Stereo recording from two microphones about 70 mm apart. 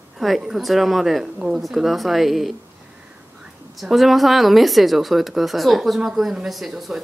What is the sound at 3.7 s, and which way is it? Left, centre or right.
Speech, centre.